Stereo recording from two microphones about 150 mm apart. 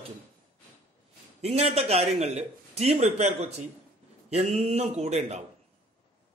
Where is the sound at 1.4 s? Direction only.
45° right (ahead or behind).